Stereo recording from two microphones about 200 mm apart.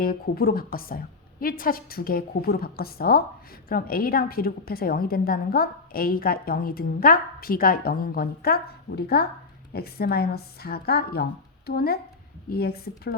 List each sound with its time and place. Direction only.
0.0 s a woman's voice: 50° left (ahead or behind)